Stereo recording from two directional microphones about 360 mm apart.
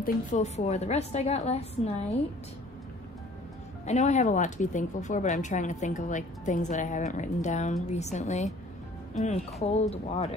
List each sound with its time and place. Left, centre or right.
0.0 s a woman's voice: centre
3.8 s speech: centre
9.6 s a woman's voice: centre